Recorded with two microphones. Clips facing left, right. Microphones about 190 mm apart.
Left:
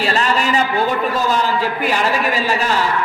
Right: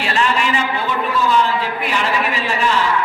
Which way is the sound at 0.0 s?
40° left (ahead or behind).